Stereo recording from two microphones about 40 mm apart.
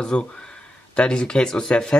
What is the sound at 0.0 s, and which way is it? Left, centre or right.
Speech, centre.